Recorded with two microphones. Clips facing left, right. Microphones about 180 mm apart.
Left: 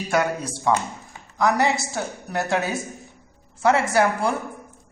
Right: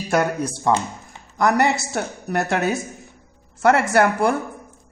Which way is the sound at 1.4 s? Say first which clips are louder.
Right 2 dB; 55° right (ahead or behind).